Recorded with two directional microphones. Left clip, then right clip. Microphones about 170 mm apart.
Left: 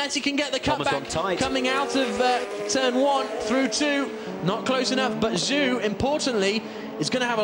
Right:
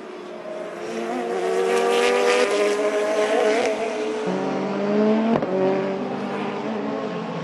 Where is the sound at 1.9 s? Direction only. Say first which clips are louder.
Right 4 dB; 35° right (ahead or behind).